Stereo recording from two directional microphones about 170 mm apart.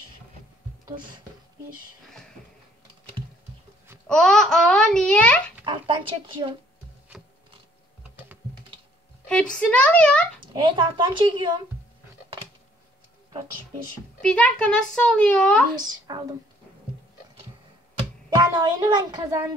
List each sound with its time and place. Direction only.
0.8 s a woman's voice: 25° right (ahead or behind)
4.1 s a child's voice: 5° left (ahead or behind)
5.7 s a woman's voice: 30° right (ahead or behind)
9.3 s a woman's voice: 5° left (ahead or behind)
10.5 s a woman's voice: 30° right (ahead or behind)
14.2 s a child's voice: 5° left (ahead or behind)
15.8 s a woman's voice: 25° right (ahead or behind)
18.3 s a woman's voice: 25° right (ahead or behind)